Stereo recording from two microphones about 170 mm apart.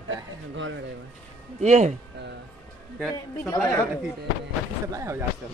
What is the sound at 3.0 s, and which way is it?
Speech, centre (ahead or behind).